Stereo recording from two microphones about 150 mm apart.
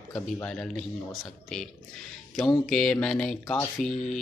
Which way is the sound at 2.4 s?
5° left (ahead or behind).